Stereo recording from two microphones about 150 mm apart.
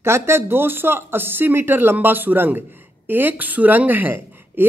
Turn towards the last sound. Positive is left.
turn(degrees=-15)  # may be behind; listen again after turning